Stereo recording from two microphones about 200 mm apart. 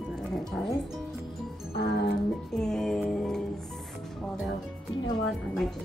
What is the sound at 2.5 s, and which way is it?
Music, 5° left (ahead or behind).